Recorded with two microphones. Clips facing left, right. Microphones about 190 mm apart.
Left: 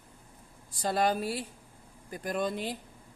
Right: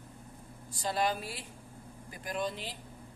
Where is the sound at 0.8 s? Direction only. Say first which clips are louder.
Left 4 dB; 45° left (ahead or behind).